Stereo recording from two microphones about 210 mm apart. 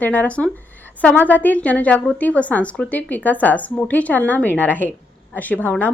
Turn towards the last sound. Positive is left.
turn(degrees=10)  # may be behind; listen again after turning